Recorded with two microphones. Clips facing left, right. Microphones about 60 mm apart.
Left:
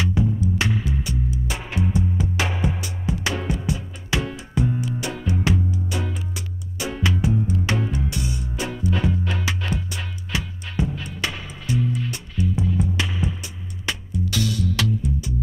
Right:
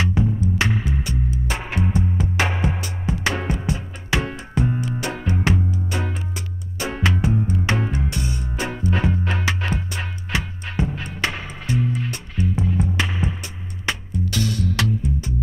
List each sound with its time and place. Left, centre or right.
0.0 s music: right